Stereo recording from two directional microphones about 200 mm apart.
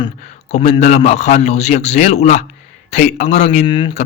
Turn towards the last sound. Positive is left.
turn(degrees=25)  # may be behind; listen again after turning